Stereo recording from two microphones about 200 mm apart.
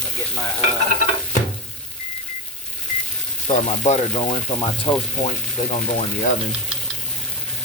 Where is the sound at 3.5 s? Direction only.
35° left (ahead or behind); by 5.0 s 20° left (ahead or behind).